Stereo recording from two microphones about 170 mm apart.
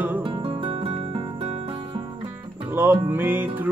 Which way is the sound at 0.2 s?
30° right (ahead or behind).